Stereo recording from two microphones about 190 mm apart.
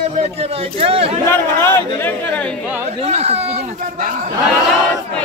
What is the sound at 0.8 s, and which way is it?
Speech, 30° right (ahead or behind).